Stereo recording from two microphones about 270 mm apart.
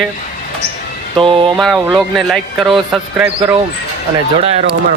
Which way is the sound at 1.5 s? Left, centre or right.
Centre.